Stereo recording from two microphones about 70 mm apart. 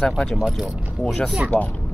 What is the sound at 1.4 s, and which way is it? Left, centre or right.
Speech, centre.